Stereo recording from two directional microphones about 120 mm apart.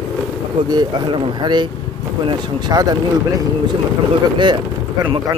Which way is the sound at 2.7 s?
30° right (ahead or behind).